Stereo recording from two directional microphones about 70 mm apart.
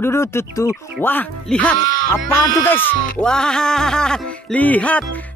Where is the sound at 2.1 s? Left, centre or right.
Left.